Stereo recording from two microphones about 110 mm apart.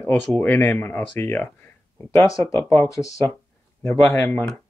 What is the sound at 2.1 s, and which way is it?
Speech, 30° left (ahead or behind).